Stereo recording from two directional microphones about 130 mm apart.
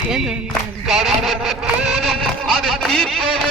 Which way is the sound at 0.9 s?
Centre (ahead or behind).